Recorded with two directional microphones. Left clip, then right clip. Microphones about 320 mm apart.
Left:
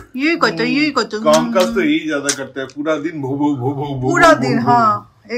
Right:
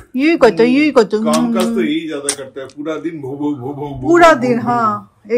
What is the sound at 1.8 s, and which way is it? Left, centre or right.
A man's voice, left.